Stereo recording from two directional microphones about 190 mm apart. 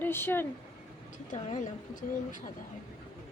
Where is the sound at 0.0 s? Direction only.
10° left (ahead or behind).